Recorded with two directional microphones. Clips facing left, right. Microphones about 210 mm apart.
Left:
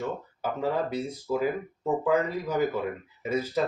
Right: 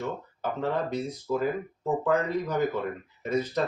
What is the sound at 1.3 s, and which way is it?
Speech, 10° left (ahead or behind).